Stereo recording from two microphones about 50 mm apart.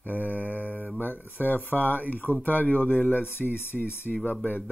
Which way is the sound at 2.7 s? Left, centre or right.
Left.